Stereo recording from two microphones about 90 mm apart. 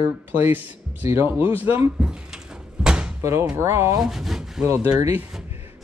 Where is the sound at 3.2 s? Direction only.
30° right (ahead or behind).